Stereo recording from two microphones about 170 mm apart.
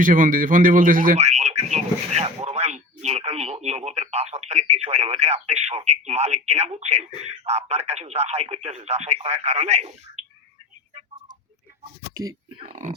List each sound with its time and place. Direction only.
0.0 s speech: 55° right (ahead or behind)
12.1 s speech: 20° right (ahead or behind)
12.6 s speech: 45° right (ahead or behind)